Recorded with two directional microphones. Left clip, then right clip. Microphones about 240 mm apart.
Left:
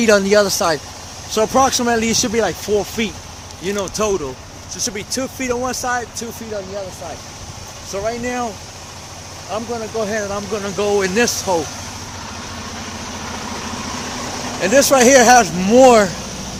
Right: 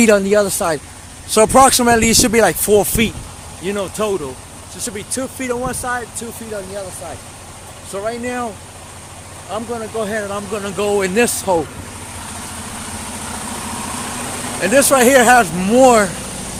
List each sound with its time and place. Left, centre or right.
0.1 s speech: centre
1.3 s speech: right
3.0 s speech: right
3.6 s speech: centre
4.9 s speech: centre
7.9 s speech: centre; by 11.6 s right
14.6 s speech: centre